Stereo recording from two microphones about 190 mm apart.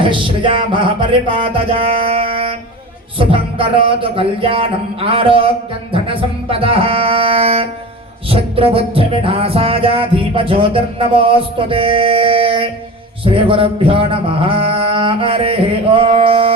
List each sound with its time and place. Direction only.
0.0 s music: 25° right (ahead or behind)
2.0 s a sound: 30° right (ahead or behind)
3.2 s music: 30° right (ahead or behind)